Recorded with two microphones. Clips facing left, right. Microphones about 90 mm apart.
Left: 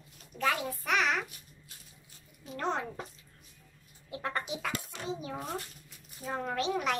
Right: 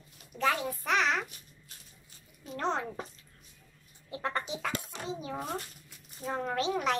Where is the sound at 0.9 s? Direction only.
5° left (ahead or behind).